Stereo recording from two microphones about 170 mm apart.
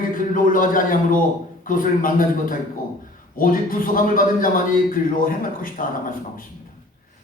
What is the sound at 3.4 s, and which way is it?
Speech, 55° left (ahead or behind).